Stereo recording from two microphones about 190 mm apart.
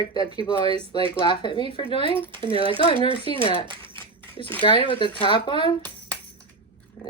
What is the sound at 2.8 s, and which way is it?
Speech, 30° left (ahead or behind).